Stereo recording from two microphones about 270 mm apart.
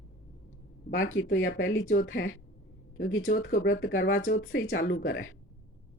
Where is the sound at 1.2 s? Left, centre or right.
Left.